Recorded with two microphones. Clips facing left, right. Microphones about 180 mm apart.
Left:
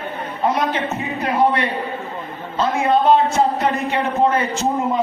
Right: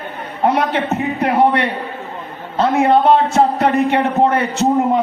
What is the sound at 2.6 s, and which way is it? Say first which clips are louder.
A man's voice: right 4 dB; 65° right (ahead or behind).